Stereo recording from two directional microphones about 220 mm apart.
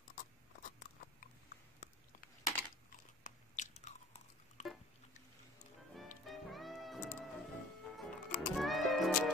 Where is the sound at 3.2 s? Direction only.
35° left (ahead or behind).